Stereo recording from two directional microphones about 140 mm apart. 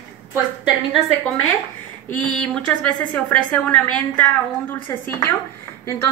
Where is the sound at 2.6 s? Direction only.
10° left (ahead or behind).